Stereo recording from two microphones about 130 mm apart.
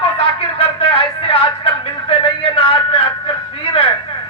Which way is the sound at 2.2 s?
50° left (ahead or behind).